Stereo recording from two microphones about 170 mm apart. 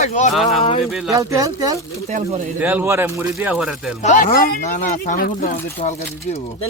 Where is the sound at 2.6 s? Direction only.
10° right (ahead or behind).